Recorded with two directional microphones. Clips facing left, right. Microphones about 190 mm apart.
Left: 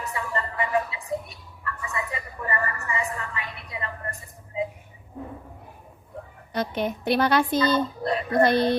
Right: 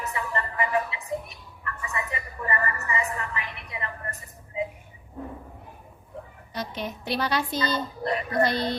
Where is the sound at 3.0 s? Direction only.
30° left (ahead or behind).